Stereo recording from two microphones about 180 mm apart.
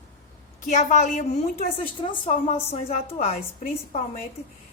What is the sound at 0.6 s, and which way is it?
A woman's voice, 45° left (ahead or behind).